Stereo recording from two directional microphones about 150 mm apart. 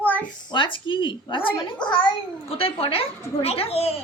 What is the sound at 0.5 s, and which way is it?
A child's voice, 35° left (ahead or behind).